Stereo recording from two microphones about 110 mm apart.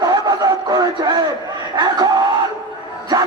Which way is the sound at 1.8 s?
40° right (ahead or behind).